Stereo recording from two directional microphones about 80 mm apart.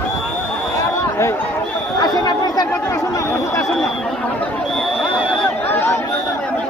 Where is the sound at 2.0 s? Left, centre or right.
Left.